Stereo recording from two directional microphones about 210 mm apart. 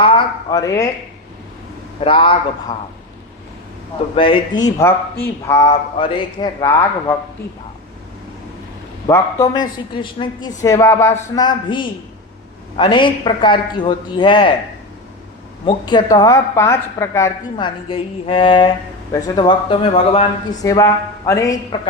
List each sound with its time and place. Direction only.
0.5 s speech: 15° left (ahead or behind)
2.0 s a woman's voice: 25° left (ahead or behind)
4.1 s speech: 25° left (ahead or behind)
5.6 s a woman's voice: 25° left (ahead or behind)
9.0 s a woman's voice: 15° left (ahead or behind)
15.6 s a woman's voice: 20° left (ahead or behind)
20.7 s a woman's voice: 15° left (ahead or behind)